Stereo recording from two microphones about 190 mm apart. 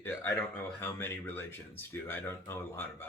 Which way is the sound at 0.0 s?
10° left (ahead or behind).